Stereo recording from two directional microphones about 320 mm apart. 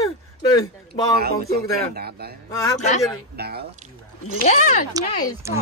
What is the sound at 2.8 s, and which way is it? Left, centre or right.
Speech, left.